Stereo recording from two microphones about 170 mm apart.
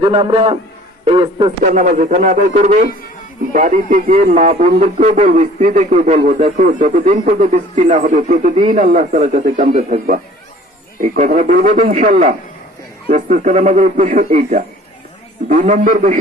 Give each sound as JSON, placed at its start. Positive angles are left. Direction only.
{"t": 0.0, "sound": "a man's voice", "side_deg": -30}
{"t": 1.6, "sound": "speech", "side_deg": -50}